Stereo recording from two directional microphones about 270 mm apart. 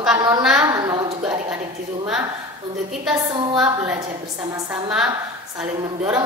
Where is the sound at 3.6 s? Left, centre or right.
Centre.